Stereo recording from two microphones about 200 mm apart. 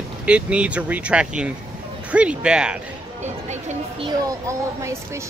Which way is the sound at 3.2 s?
35° right (ahead or behind).